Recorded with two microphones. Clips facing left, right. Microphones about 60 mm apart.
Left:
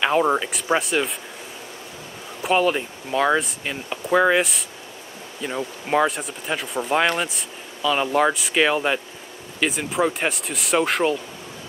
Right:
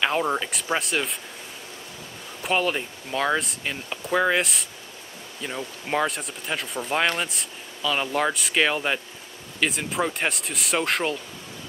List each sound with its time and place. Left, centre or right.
0.0 s speech: centre
2.4 s speech: centre